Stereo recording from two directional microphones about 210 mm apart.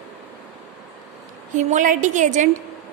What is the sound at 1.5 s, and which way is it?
Speech, 35° right (ahead or behind).